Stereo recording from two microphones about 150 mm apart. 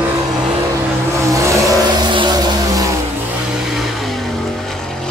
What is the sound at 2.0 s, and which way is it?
Vehicle, 30° right (ahead or behind).